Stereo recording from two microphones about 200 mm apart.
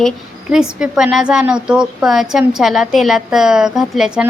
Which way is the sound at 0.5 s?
5° right (ahead or behind).